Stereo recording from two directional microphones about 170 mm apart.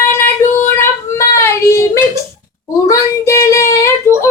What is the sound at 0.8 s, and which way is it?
Child singing, 15° left (ahead or behind).